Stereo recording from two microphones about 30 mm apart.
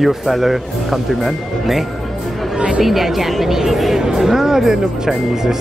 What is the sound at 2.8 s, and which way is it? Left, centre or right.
A woman's voice, centre.